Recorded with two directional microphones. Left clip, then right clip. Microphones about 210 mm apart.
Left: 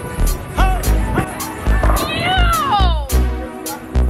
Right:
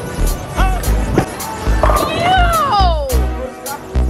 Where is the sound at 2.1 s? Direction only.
45° right (ahead or behind).